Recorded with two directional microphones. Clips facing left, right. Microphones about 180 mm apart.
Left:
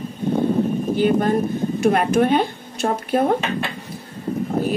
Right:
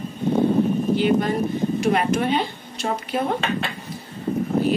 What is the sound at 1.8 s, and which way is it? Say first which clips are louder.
Speech: left 5 dB; 50° left (ahead or behind).